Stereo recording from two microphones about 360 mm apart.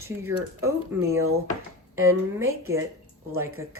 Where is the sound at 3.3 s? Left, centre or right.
Right.